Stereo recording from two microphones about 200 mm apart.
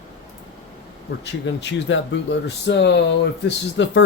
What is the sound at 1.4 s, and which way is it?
Speech, 65° left (ahead or behind).